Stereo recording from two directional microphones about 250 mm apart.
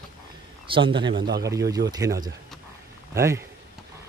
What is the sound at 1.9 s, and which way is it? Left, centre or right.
Speech, centre.